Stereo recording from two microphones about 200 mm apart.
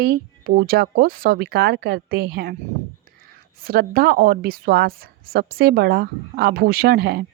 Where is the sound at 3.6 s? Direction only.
50° right (ahead or behind).